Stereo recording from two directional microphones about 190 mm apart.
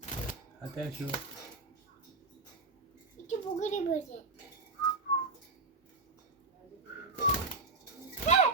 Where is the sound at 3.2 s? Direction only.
40° left (ahead or behind).